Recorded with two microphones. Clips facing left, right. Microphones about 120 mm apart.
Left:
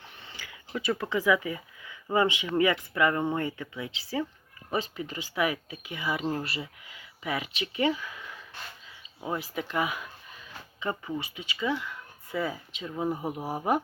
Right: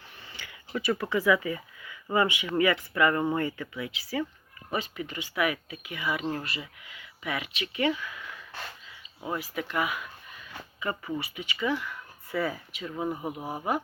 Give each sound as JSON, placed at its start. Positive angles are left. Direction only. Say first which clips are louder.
{"t": 0.8, "sound": "speech", "louder": "right 1 dB", "side_deg": 20}
{"t": 3.9, "sound": "speech", "louder": "left 1 dB", "side_deg": 25}
{"t": 9.3, "sound": "speech", "louder": "even", "side_deg": 30}
{"t": 10.8, "sound": "speech", "louder": "even", "side_deg": 20}